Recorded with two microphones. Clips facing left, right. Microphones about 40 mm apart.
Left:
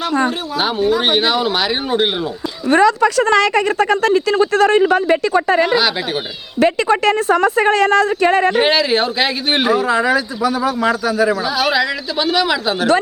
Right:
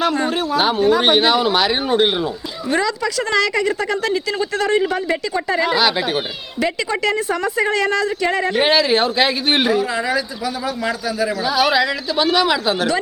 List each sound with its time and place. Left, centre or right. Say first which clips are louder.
0.3 s speech: right 2 dB; centre
2.6 s speech: left 8 dB; left
5.6 s speech: left 1 dB; centre
6.6 s speech: left 6 dB; left
8.5 s speech: left 1 dB; centre
9.7 s a man's voice: left 4 dB; left
11.4 s speech: even; centre